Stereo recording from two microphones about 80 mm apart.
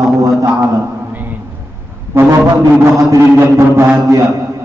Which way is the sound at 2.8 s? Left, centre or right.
Right.